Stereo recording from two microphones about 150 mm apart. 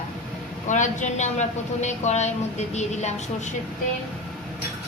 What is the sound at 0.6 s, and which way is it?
Speech, 55° left (ahead or behind).